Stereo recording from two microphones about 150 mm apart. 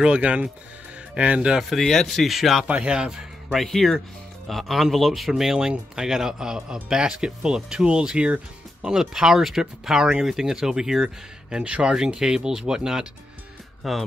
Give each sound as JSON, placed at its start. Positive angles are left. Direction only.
{"t": 0.0, "sound": "speech", "side_deg": -10}